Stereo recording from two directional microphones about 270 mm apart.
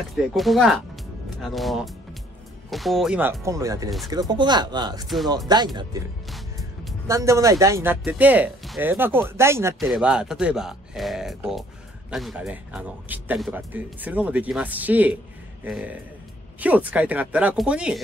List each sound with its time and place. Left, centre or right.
0.1 s speech: centre
5.0 s speech: centre
5.5 s speech: centre
6.3 s music: centre
7.1 s speech: centre